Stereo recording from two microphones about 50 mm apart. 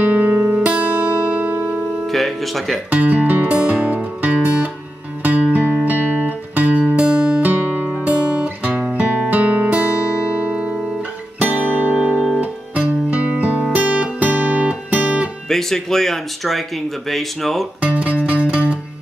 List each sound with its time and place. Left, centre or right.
0.0 s music: right
0.7 s music: right
2.0 s speech: centre
2.9 s music: right
7.1 s music: centre
7.4 s music: right
8.0 s guitar: right
11.5 s music: right
15.4 s speech: centre
17.7 s music: right